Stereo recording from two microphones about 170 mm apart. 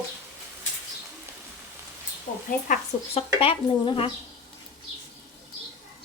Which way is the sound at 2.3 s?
50° left (ahead or behind).